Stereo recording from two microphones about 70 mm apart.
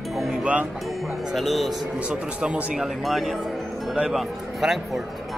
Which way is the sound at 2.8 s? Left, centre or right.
Centre.